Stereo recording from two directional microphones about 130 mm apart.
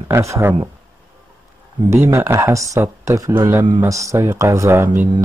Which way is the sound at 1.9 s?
20° right (ahead or behind).